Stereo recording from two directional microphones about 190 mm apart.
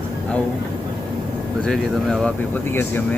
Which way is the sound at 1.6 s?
Centre (ahead or behind).